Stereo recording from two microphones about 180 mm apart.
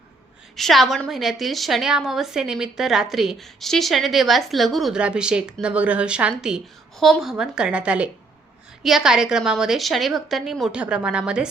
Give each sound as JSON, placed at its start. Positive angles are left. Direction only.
{"t": 0.5, "sound": "a woman's voice", "side_deg": 0}